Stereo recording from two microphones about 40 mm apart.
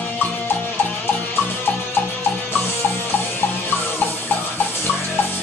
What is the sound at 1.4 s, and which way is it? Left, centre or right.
Music, left.